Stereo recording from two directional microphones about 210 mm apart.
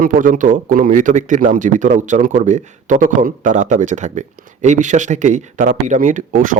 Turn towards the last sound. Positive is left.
turn(degrees=-40)  # may be behind; listen again after turning